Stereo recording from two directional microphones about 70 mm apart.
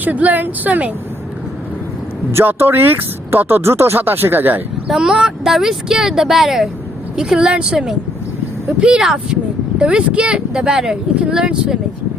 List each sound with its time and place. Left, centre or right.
0.0 s speech: right
2.3 s speech: right
4.9 s speech: centre